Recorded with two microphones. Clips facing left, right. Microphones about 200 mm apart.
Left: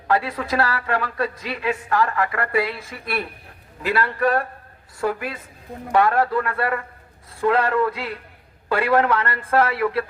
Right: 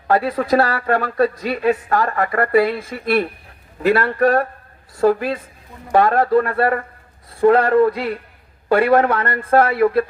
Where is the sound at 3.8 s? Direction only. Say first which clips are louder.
Right 6 dB; 45° right (ahead or behind).